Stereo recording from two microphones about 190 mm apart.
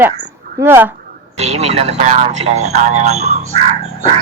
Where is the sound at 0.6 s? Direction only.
10° right (ahead or behind).